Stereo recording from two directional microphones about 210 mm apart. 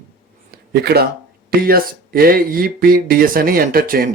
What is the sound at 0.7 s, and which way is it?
Speech, 45° right (ahead or behind).